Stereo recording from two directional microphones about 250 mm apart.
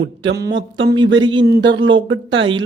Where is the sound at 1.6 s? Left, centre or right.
Right.